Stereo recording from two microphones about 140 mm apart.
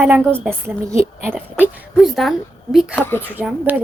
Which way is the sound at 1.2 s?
15° right (ahead or behind).